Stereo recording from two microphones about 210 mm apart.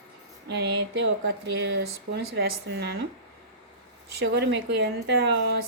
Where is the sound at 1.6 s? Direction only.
55° right (ahead or behind).